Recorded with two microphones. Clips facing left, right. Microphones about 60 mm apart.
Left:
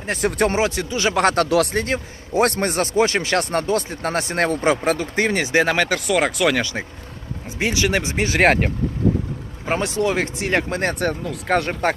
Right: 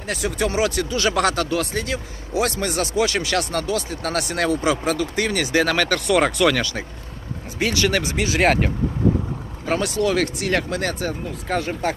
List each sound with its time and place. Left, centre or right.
0.2 s speech: left
0.5 s speech: left
1.4 s speech: left
1.7 s speech: left; by 6.0 s centre
6.1 s speech: centre
6.6 s speech: left
9.6 s speech: left
11.0 s speech: left